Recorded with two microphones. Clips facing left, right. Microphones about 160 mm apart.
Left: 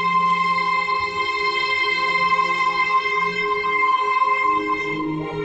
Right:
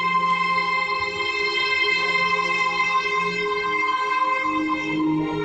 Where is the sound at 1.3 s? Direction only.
70° right (ahead or behind).